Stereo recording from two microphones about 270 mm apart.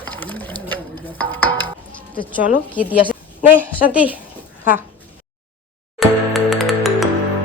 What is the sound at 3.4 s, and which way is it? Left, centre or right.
Speech, centre.